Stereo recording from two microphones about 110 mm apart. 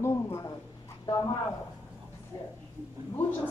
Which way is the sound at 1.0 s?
40° left (ahead or behind).